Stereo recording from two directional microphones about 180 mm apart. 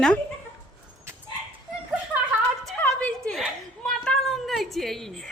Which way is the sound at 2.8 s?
5° left (ahead or behind).